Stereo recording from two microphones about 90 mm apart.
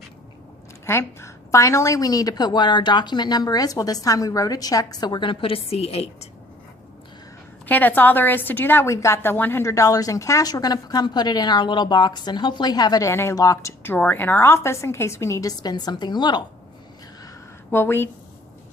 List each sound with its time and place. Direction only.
0.9 s a woman's voice: 30° left (ahead or behind); by 6.1 s 90° left
7.7 s a woman's voice: 20° left (ahead or behind); by 13.0 s 50° left (ahead or behind)
13.0 s a woman's voice: 30° left (ahead or behind)
13.9 s a woman's voice: 20° left (ahead or behind); by 16.4 s 55° left (ahead or behind)
17.7 s a woman's voice: 25° left (ahead or behind)